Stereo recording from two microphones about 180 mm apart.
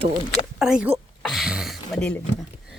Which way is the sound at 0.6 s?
5° right (ahead or behind).